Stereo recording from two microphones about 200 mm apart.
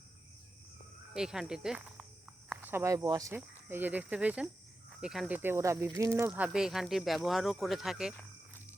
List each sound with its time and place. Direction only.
1.1 s cricket: 5° right (ahead or behind)
2.5 s speech: 10° right (ahead or behind)